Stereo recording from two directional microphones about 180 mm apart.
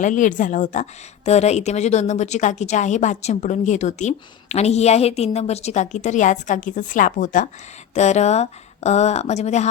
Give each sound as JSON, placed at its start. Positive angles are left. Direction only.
{"t": 0.0, "sound": "speech", "side_deg": 45}